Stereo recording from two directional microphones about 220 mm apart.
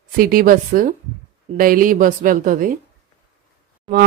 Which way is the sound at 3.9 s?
20° right (ahead or behind).